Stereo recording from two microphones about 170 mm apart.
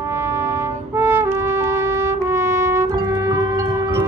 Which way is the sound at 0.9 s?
15° right (ahead or behind).